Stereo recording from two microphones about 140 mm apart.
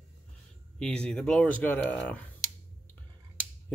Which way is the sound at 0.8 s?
5° left (ahead or behind).